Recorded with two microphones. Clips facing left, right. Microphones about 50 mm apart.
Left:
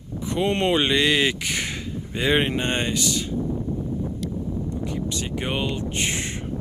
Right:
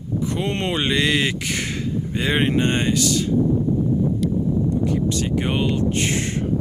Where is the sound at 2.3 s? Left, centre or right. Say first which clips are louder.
Right 2 dB; centre.